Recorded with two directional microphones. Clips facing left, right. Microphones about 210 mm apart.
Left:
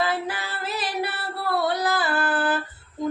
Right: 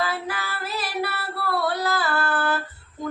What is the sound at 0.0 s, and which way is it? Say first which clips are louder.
Female singing: left 2 dB; 20° left (ahead or behind).